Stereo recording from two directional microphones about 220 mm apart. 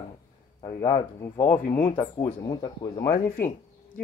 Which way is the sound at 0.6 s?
20° left (ahead or behind).